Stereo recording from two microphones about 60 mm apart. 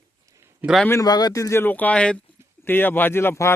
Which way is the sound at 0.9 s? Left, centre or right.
Left.